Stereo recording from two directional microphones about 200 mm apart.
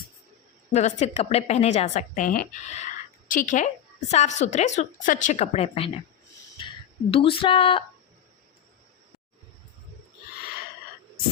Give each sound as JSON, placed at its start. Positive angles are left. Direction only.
{"t": 0.7, "sound": "a woman's voice", "side_deg": 35}